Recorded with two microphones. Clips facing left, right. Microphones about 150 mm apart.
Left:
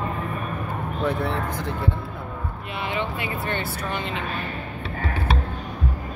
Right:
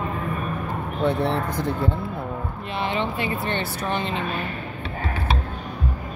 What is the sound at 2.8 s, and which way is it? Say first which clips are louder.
Speech: right 3 dB; 30° right (ahead or behind).